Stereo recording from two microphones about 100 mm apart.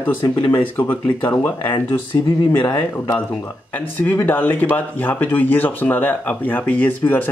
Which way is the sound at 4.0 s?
20° left (ahead or behind).